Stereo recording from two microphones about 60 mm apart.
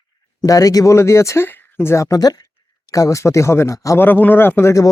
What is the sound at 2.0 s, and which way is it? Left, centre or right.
Speech, left.